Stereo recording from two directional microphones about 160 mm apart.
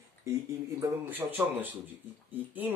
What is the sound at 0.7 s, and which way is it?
Speech, 15° right (ahead or behind).